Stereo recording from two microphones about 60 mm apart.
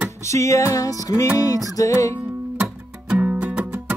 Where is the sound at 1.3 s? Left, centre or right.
Left.